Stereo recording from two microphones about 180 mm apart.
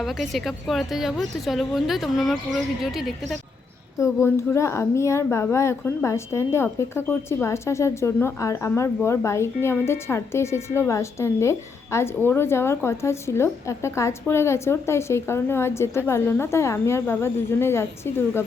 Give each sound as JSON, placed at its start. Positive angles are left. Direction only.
{"t": 0.0, "sound": "speech", "side_deg": 0}
{"t": 4.0, "sound": "a woman's voice", "side_deg": 15}